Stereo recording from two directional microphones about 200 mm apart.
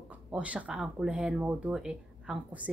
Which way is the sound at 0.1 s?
5° right (ahead or behind).